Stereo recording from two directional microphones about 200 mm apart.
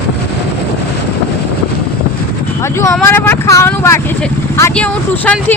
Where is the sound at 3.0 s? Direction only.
10° left (ahead or behind).